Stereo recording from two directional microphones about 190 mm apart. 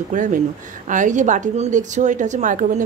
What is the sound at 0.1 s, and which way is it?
A woman's voice, 40° right (ahead or behind).